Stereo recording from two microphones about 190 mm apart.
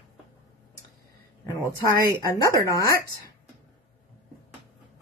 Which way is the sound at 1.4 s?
20° left (ahead or behind).